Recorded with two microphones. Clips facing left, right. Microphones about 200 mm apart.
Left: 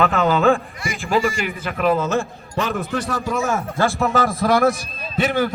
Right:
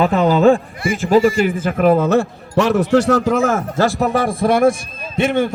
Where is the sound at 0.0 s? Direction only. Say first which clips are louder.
Right 4 dB; 35° right (ahead or behind); by 3.6 s 65° right (ahead or behind).